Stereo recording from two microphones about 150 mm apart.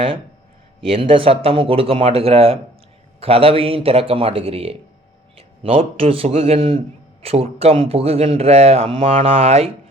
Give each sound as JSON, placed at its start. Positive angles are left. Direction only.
{"t": 0.9, "sound": "a man's voice", "side_deg": -35}